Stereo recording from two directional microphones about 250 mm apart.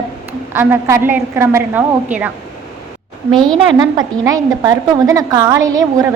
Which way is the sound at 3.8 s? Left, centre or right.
Centre.